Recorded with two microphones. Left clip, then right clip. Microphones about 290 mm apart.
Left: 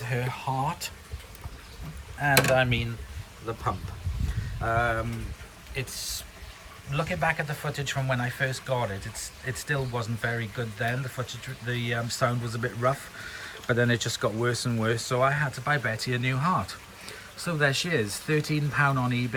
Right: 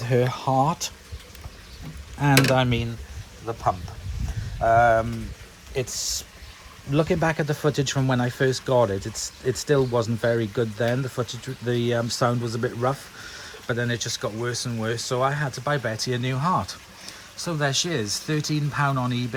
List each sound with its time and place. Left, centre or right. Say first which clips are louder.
0.1 s speech: right 9 dB; centre
2.6 s speech: right 1 dB; centre